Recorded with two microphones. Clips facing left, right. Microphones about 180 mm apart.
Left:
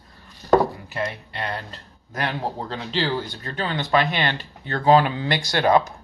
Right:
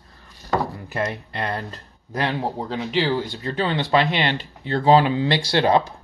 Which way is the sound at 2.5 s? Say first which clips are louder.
Right 3 dB; 10° right (ahead or behind).